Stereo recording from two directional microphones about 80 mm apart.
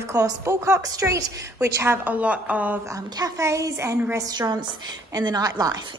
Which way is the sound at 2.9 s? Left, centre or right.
Right.